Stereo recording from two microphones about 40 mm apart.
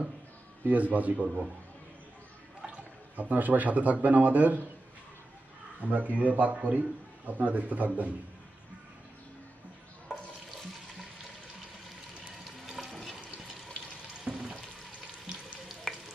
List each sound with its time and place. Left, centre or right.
0.7 s a man's voice: right
3.2 s a man's voice: right
5.8 s a man's voice: right
12.4 s water: centre
14.3 s frying: centre
15.9 s frying: centre